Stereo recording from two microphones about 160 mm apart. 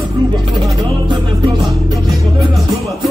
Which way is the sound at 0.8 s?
30° right (ahead or behind).